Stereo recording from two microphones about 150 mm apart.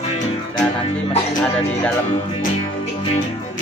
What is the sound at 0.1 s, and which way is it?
Music, 45° left (ahead or behind).